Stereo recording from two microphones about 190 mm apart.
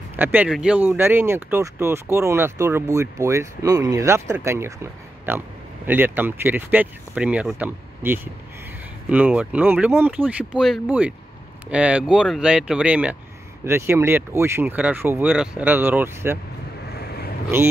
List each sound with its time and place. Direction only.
0.1 s speech: 10° right (ahead or behind)
16.9 s vehicle: 55° left (ahead or behind)